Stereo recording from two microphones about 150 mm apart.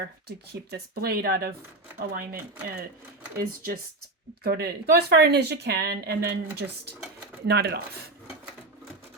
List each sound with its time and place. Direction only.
0.3 s speech: 90° right
3.3 s speech: 75° right (ahead or behind)
4.4 s speech: 90° right